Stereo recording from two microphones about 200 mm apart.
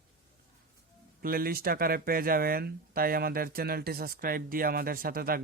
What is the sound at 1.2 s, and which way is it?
A man's voice, 45° right (ahead or behind).